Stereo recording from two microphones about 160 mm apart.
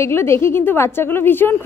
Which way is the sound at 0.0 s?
15° left (ahead or behind).